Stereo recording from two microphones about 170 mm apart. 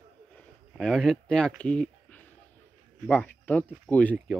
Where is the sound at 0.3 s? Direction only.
5° left (ahead or behind).